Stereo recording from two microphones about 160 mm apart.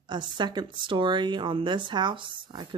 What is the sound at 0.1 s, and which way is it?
Speech, 30° right (ahead or behind).